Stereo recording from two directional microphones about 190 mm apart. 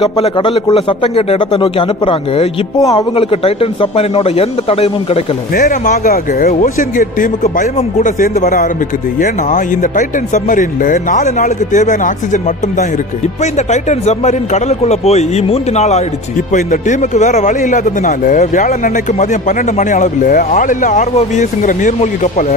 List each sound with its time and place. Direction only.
0.2 s a man's voice: 25° left (ahead or behind)
5.5 s speech: 50° left (ahead or behind)